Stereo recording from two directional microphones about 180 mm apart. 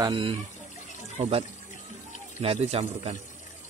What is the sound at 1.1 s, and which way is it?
Speech, 40° right (ahead or behind).